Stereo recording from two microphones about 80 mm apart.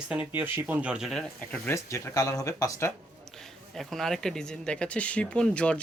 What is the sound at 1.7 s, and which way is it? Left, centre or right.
Speech, left.